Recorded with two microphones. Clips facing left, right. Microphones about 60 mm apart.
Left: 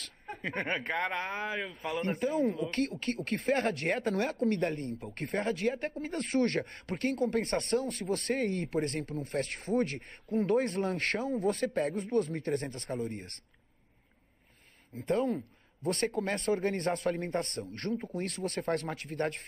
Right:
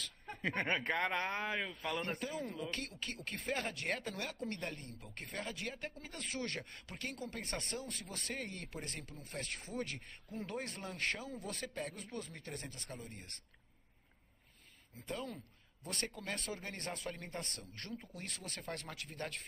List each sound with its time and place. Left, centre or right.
0.3 s speech: centre
2.7 s speech: left
3.6 s speech: left
10.9 s speech: left
11.4 s speech: left
12.9 s speech: left
15.0 s speech: left